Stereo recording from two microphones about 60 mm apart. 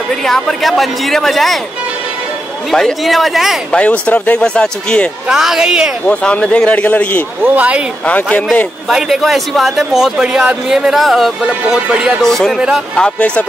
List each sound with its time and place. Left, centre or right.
0.1 s a man's voice: centre
2.7 s a man's voice: centre
3.7 s a man's voice: centre
5.3 s speech: centre
6.0 s a man's voice: centre
7.4 s speech: right
8.0 s a man's voice: left
8.9 s a man's voice: centre
11.0 s a man's voice: centre
11.4 s speech: centre
12.2 s a man's voice: centre
12.5 s speech: centre
13.2 s a man's voice: left